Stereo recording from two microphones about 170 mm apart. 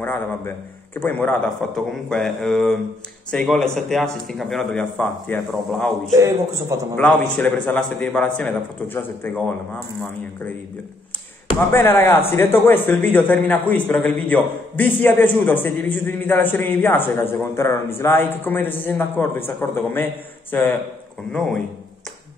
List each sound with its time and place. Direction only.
0.9 s a man's voice: 10° left (ahead or behind)
6.1 s a man's voice: 15° right (ahead or behind)
7.0 s a man's voice: 10° left (ahead or behind)
11.7 s a man's voice: 15° left (ahead or behind)
21.3 s a man's voice: 5° left (ahead or behind)